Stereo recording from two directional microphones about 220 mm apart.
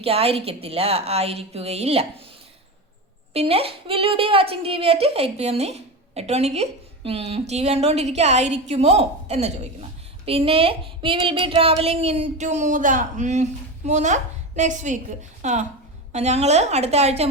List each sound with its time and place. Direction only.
0.0 s a woman's voice: 25° right (ahead or behind)
3.3 s a woman's voice: 25° right (ahead or behind)